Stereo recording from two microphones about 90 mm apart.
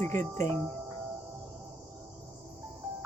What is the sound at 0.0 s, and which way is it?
Speech, 30° left (ahead or behind).